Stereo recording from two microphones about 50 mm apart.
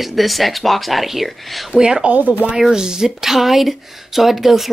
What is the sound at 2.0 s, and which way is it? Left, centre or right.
Speech, right.